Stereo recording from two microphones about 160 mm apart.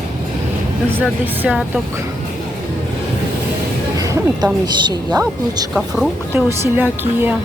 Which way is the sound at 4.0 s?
25° right (ahead or behind).